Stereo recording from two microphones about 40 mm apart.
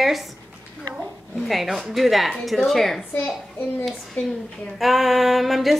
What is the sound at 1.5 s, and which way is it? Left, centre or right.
Speech, centre.